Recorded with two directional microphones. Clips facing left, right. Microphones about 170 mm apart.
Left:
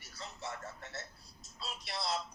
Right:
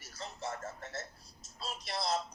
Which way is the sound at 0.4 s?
45° right (ahead or behind).